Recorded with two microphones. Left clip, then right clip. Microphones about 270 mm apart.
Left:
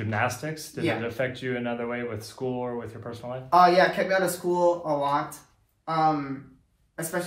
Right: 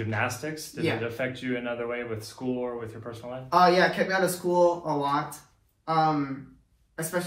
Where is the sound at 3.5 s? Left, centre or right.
Centre.